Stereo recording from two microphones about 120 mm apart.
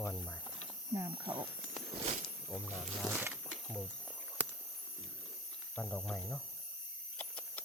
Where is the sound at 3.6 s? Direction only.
5° left (ahead or behind).